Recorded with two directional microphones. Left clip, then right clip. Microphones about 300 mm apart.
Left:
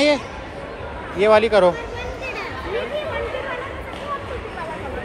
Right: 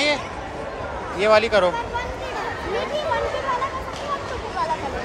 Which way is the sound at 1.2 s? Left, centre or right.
Centre.